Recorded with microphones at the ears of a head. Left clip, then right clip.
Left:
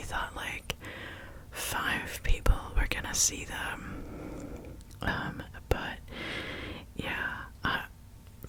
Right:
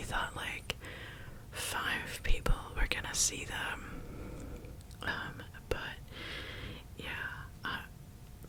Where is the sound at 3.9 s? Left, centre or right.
Left.